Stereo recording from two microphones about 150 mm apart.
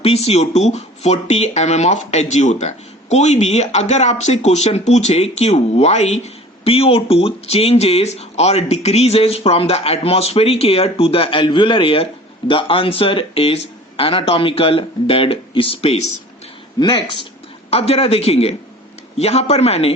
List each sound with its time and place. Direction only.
0.0 s speech: 45° left (ahead or behind)
16.8 s speech: 30° left (ahead or behind)
17.7 s speech: 40° left (ahead or behind)